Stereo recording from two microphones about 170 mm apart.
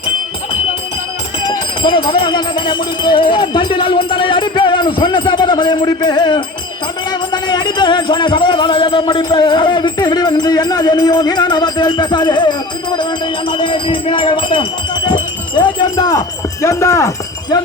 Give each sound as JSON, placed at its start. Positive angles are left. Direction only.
{"t": 1.5, "sound": "speech", "side_deg": 30}